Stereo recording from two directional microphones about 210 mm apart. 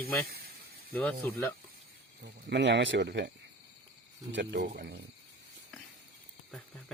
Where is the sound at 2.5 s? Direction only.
55° right (ahead or behind).